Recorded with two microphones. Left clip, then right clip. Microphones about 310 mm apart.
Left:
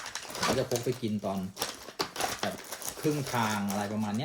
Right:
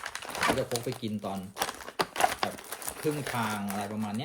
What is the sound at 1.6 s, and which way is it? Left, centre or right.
Typewriter, right.